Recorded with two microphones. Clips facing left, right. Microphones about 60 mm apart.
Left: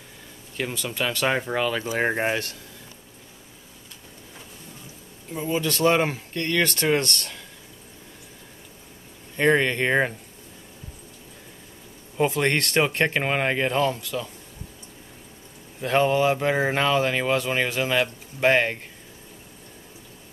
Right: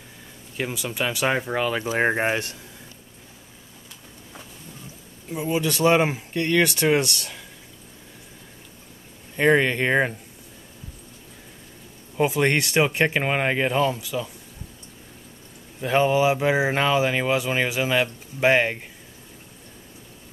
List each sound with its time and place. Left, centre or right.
0.6 s speech: centre
5.3 s speech: centre
9.4 s speech: centre
12.2 s speech: centre
15.8 s speech: centre